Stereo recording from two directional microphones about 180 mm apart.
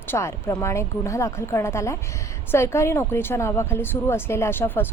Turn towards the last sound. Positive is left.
turn(degrees=10)  # may be behind; listen again after turning